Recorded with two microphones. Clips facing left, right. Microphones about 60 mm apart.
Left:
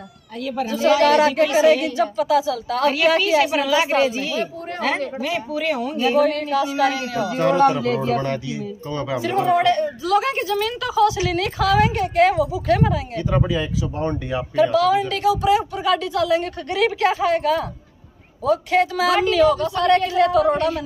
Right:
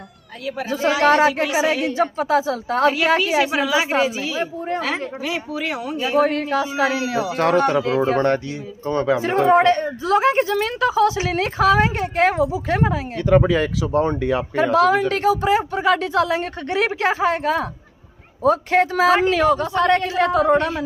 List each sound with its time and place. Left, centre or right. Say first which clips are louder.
1.0 s a woman's voice: right 4 dB; right
3.2 s a woman's voice: left 1 dB; centre
6.1 s a woman's voice: right 2 dB; right
7.3 s speech: left 1 dB; right
8.2 s a woman's voice: right 5 dB; right
13.1 s speech: right 5 dB; right
13.9 s speech: right 7 dB; right
14.5 s a woman's voice: left 1 dB; right